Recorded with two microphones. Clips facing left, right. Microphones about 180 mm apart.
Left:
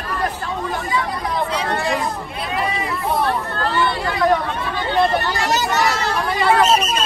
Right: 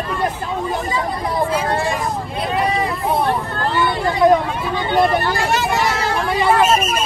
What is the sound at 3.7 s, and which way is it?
Speech, 20° right (ahead or behind).